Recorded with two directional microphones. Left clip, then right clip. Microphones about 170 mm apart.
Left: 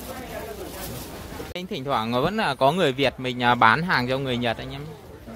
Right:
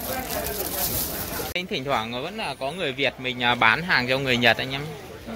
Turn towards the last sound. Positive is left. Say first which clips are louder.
# right 7 dB
turn(degrees=10)  # may be behind; listen again after turning